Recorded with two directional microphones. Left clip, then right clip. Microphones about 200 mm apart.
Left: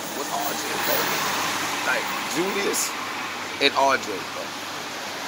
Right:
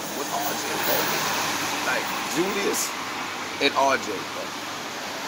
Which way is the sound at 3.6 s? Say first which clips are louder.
Left 1 dB; centre (ahead or behind).